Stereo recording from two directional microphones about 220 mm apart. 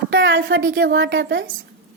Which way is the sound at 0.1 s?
45° right (ahead or behind).